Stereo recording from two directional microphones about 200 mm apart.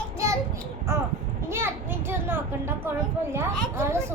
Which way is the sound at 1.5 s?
10° right (ahead or behind).